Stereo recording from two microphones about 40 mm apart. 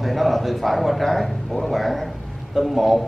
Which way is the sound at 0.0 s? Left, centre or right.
Centre.